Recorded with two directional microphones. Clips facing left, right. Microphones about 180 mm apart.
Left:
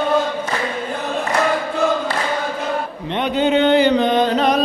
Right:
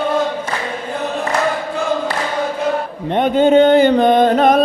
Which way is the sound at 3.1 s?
45° right (ahead or behind).